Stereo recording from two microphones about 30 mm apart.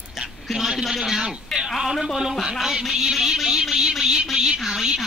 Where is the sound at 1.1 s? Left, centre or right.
Centre.